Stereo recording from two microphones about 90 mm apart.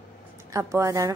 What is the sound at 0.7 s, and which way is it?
Speech, 35° right (ahead or behind).